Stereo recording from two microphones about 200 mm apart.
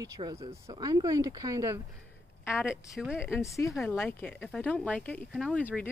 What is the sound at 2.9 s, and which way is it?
Speech, centre (ahead or behind).